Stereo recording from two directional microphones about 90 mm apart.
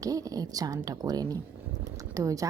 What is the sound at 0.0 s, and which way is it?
A woman's voice, 40° right (ahead or behind).